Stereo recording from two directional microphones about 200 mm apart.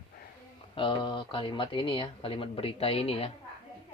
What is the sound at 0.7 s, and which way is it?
Speech, 25° left (ahead or behind).